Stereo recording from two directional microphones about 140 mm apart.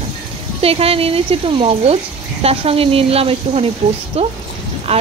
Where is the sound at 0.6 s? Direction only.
45° right (ahead or behind).